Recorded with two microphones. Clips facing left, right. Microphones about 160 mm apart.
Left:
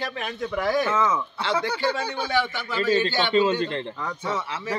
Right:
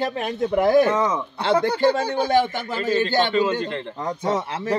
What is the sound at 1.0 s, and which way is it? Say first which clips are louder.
Speech: right 1 dB; 30° right (ahead or behind).